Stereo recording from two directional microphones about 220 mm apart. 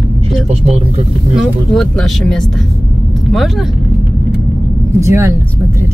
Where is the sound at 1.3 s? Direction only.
Centre (ahead or behind).